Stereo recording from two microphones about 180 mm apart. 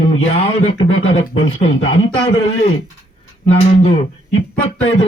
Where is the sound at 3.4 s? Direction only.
35° left (ahead or behind).